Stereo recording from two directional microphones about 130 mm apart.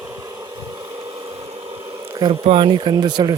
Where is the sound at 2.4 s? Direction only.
40° right (ahead or behind).